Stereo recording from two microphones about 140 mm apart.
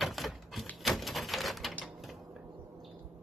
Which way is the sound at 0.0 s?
Centre (ahead or behind).